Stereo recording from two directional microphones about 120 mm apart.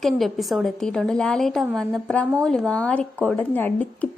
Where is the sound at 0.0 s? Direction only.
Centre (ahead or behind).